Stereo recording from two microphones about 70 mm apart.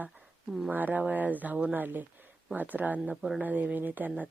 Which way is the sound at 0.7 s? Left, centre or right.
Right.